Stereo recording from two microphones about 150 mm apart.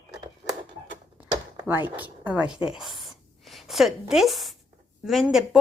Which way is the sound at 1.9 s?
10° right (ahead or behind).